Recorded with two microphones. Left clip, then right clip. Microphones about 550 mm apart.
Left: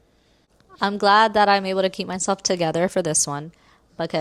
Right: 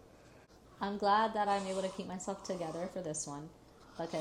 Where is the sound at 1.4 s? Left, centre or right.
Left.